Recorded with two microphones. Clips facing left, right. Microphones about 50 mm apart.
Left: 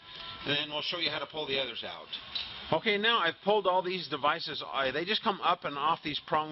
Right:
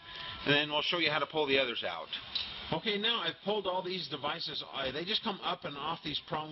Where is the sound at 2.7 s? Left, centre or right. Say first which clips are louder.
Left 6 dB; left.